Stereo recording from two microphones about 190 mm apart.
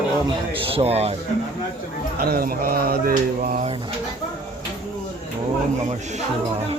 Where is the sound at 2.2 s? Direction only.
50° right (ahead or behind).